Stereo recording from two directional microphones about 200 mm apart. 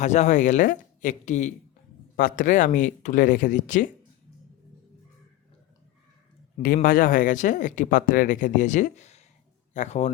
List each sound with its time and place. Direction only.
0.0 s speech: 35° left (ahead or behind)
6.8 s speech: 45° left (ahead or behind)